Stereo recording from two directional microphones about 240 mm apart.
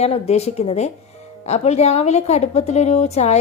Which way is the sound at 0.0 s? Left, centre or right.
Left.